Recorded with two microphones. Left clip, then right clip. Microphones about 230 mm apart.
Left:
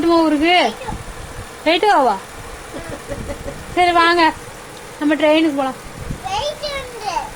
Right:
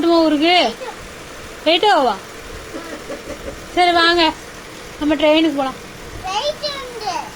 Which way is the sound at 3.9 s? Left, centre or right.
Left.